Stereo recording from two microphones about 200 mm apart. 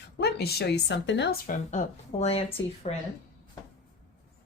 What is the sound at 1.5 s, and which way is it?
A woman's voice, 35° left (ahead or behind).